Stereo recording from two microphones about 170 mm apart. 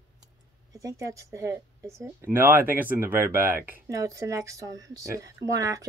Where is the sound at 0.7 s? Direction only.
20° right (ahead or behind).